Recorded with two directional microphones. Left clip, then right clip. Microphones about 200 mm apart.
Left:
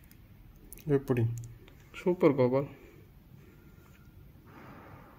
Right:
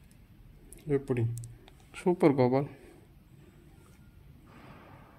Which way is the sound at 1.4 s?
35° right (ahead or behind).